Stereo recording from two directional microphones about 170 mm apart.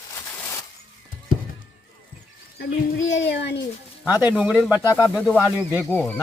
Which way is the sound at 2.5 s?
90° left.